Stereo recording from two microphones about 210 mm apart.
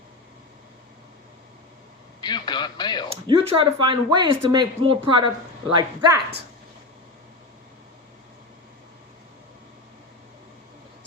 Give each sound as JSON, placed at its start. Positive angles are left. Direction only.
{"t": 2.2, "sound": "speech", "side_deg": 20}
{"t": 3.1, "sound": "speech", "side_deg": -25}